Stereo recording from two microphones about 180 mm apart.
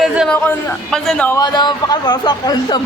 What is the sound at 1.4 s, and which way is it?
A man's voice, 25° left (ahead or behind).